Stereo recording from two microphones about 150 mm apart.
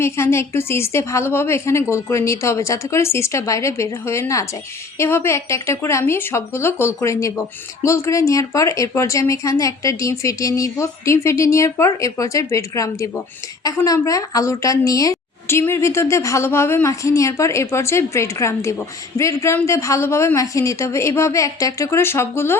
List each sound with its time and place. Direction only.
0.0 s speech: 15° left (ahead or behind)